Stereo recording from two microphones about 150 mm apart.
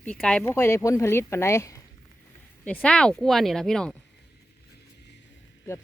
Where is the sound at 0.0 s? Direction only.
5° left (ahead or behind).